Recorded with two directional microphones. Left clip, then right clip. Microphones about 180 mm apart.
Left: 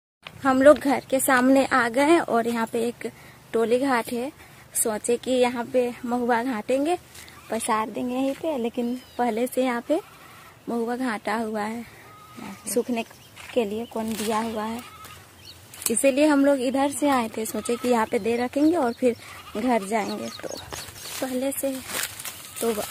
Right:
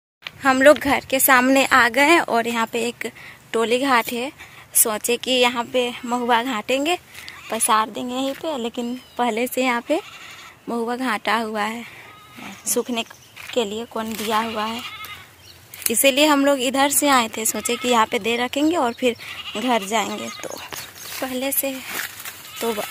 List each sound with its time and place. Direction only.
0.2 s speech: centre (ahead or behind)
4.8 s speech: centre (ahead or behind)
9.1 s speech: 10° right (ahead or behind); by 14.3 s 10° left (ahead or behind)
14.5 s speech: 5° right (ahead or behind)
15.9 s speech: centre (ahead or behind)